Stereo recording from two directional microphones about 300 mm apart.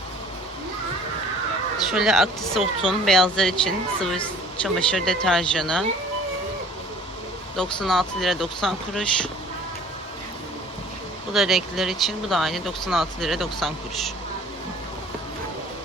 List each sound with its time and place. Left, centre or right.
1.9 s speech: centre
7.5 s speech: centre
11.3 s speech: centre